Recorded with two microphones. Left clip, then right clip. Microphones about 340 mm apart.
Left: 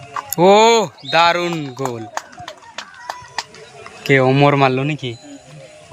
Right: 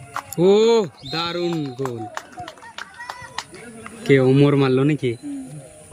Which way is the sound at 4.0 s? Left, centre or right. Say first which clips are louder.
Left 3 dB; centre.